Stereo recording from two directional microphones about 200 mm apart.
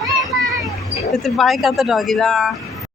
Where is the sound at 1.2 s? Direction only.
Centre (ahead or behind).